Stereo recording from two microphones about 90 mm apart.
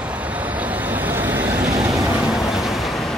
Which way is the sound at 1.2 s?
20° right (ahead or behind).